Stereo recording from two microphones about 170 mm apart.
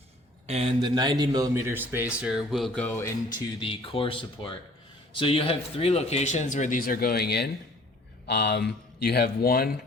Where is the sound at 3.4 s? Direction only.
30° left (ahead or behind).